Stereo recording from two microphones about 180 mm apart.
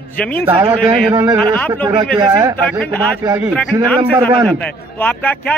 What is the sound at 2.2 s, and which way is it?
Speech, 20° right (ahead or behind).